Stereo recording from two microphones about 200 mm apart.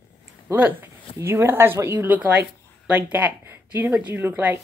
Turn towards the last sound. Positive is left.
turn(degrees=-10)  # may be behind; listen again after turning